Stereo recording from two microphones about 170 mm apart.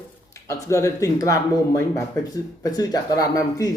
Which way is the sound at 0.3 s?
20° left (ahead or behind).